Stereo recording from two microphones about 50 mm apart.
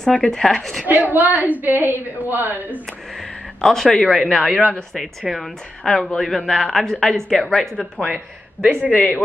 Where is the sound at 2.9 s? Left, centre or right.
Centre.